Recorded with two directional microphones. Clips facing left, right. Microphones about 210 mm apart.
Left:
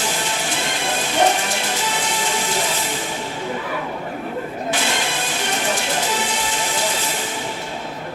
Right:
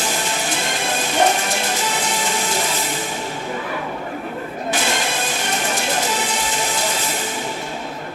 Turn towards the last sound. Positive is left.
turn(degrees=-45)  # may be behind; listen again after turning